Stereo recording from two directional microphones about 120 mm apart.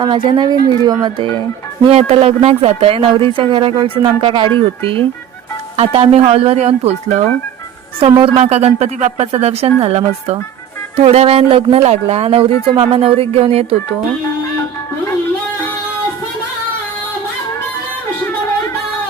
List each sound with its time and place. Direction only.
0.0 s speech: 45° right (ahead or behind)
1.9 s speech: 55° right (ahead or behind)
8.2 s speech: 55° right (ahead or behind)